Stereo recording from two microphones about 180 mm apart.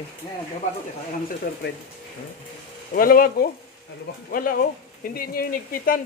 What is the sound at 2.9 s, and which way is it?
Speech, 55° left (ahead or behind).